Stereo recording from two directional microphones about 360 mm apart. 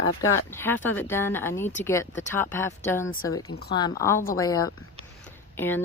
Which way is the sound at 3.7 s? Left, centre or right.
Centre.